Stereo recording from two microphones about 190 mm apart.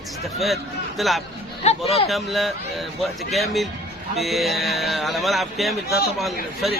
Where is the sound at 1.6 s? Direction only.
35° left (ahead or behind).